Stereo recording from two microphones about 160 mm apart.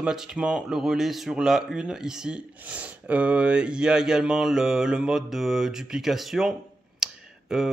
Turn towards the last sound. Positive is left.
turn(degrees=-5)  # may be behind; listen again after turning